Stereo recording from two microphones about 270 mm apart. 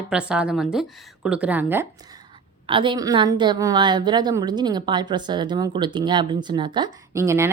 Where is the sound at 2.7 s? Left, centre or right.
Centre.